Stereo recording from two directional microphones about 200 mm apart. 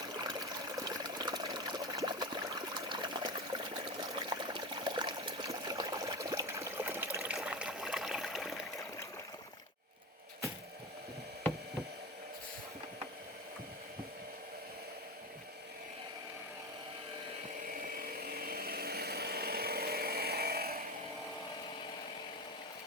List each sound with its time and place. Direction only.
0.2 s water: 20° right (ahead or behind)
7.3 s a sound: 5° right (ahead or behind)
17.7 s chainsaw: 45° right (ahead or behind)